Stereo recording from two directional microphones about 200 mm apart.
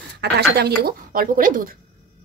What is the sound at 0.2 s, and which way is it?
Speech, 55° right (ahead or behind).